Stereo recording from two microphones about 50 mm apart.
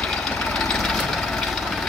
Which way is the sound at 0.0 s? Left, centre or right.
Centre.